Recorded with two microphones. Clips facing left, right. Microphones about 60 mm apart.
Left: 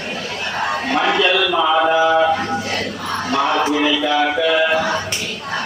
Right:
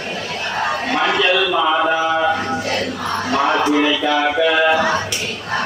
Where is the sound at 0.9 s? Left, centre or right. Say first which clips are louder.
Even; centre.